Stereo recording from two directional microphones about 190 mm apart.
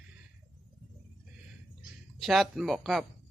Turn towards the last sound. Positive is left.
turn(degrees=0)  # may be behind; listen again after turning